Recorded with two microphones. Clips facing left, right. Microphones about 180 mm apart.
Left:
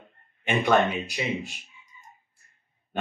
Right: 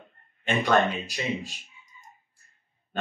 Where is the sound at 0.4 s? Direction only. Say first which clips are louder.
Left 1 dB; 15° left (ahead or behind).